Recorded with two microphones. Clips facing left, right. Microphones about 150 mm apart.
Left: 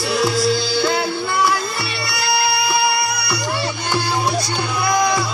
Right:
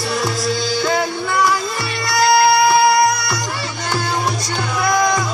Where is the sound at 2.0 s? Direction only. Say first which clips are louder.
Right 8 dB; 45° right (ahead or behind).